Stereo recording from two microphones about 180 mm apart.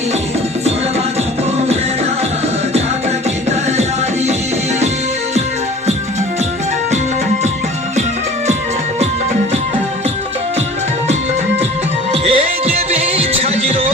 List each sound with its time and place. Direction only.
12.2 s music: 35° right (ahead or behind)